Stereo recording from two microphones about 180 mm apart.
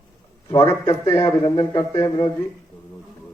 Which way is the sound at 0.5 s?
25° left (ahead or behind).